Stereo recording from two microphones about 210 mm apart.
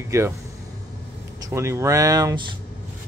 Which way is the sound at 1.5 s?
15° right (ahead or behind).